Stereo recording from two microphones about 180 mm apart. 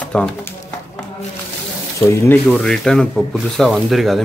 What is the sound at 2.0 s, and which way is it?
Speech, 15° left (ahead or behind).